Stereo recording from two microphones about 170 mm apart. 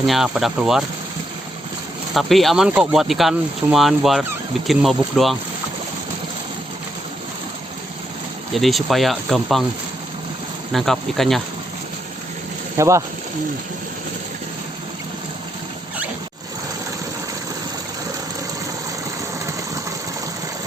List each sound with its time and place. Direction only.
0.0 s speech: centre (ahead or behind)
2.1 s speech: centre (ahead or behind)
8.5 s speech: centre (ahead or behind)
10.7 s speech: centre (ahead or behind)
12.7 s speech: 15° right (ahead or behind)